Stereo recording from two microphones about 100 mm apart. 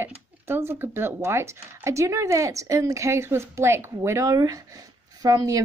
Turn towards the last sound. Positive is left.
turn(degrees=-35)  # may be behind; listen again after turning